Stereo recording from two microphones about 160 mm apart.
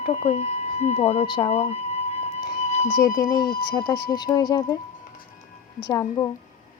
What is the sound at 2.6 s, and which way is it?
Music, 45° left (ahead or behind).